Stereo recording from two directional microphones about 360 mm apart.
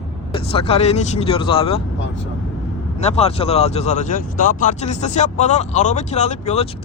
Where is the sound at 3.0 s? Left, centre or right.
Centre.